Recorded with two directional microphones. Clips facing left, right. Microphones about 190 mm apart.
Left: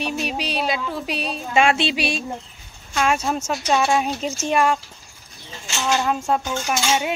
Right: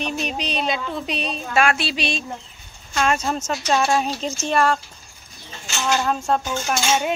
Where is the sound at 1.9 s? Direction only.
10° left (ahead or behind).